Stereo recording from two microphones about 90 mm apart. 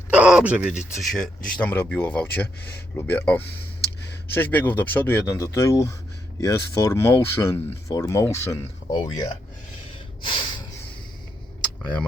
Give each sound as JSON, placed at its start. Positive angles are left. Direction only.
{"t": 0.1, "sound": "speech", "side_deg": -15}
{"t": 1.1, "sound": "speech", "side_deg": 5}
{"t": 1.7, "sound": "speech", "side_deg": 25}
{"t": 5.4, "sound": "speech", "side_deg": 35}
{"t": 8.9, "sound": "speech", "side_deg": 50}
{"t": 10.2, "sound": "snort", "side_deg": 65}